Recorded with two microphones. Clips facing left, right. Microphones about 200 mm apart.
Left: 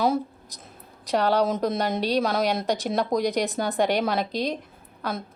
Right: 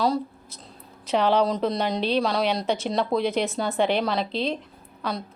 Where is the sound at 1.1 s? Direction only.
10° left (ahead or behind).